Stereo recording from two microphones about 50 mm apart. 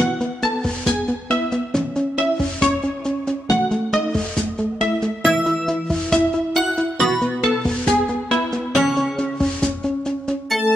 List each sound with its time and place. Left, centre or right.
0.8 s music: centre